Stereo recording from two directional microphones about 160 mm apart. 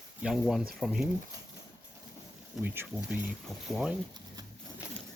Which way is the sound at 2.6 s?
10° right (ahead or behind).